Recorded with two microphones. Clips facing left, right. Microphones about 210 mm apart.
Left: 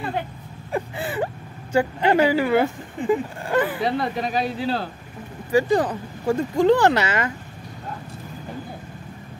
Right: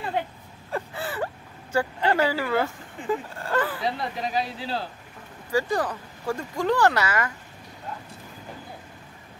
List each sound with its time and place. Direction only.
0.7 s speech: 15° left (ahead or behind)
3.8 s speech: 65° left (ahead or behind)
5.5 s speech: 20° left (ahead or behind)